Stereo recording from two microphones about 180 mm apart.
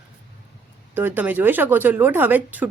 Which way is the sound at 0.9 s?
10° right (ahead or behind).